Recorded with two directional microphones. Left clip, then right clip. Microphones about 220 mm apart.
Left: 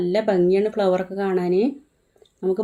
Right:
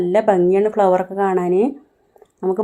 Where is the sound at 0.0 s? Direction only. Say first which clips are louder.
Right 5 dB; centre (ahead or behind).